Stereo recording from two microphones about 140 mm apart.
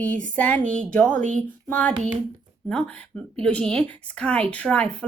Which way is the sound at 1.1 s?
65° right (ahead or behind).